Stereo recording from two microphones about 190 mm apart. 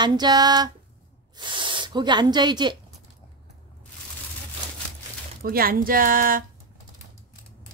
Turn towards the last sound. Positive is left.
turn(degrees=-45)  # may be behind; listen again after turning